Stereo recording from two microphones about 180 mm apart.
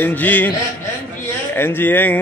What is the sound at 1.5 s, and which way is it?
Speech, 10° left (ahead or behind).